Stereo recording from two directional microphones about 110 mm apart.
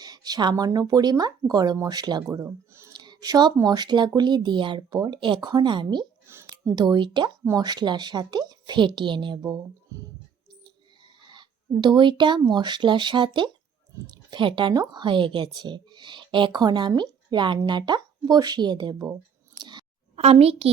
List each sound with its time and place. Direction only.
0.0 s speech: 35° right (ahead or behind)
2.2 s speech: 25° right (ahead or behind)
2.9 s speech: 40° right (ahead or behind)
6.2 s a sound: 25° right (ahead or behind)
6.5 s speech: 40° right (ahead or behind)
7.4 s speech: 35° right (ahead or behind)
9.4 s speech: 35° right (ahead or behind)
11.3 s speech: 45° right (ahead or behind)
19.5 s scissors: 45° right (ahead or behind)
20.1 s a child's voice: 65° right (ahead or behind)